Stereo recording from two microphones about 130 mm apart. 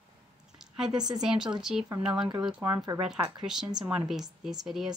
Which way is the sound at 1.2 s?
5° right (ahead or behind).